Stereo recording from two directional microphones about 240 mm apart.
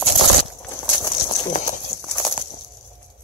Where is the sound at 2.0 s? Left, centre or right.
Centre.